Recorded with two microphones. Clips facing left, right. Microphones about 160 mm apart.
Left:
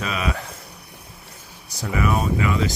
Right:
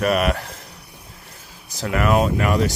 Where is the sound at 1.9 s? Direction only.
75° right (ahead or behind).